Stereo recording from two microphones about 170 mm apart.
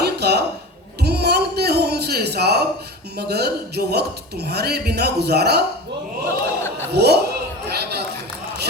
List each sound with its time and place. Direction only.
0.0 s a sound: 75° right (ahead or behind)
3.2 s speech: 70° right (ahead or behind)
6.9 s speech: 75° right (ahead or behind)